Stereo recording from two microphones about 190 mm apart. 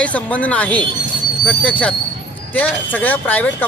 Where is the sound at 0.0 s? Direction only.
5° left (ahead or behind).